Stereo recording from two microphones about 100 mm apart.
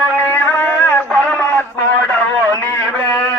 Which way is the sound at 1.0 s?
5° left (ahead or behind).